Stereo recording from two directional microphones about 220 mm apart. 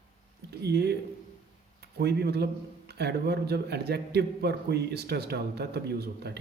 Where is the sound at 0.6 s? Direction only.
50° right (ahead or behind).